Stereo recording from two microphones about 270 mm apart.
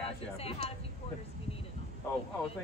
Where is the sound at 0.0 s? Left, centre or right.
Left.